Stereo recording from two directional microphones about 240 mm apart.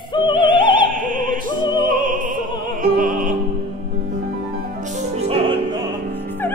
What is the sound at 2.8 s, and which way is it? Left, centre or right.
Music, right.